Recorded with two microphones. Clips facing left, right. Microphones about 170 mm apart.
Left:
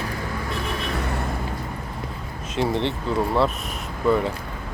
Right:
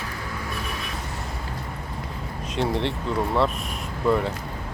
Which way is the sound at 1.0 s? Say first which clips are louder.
Left 7 dB; 65° left (ahead or behind).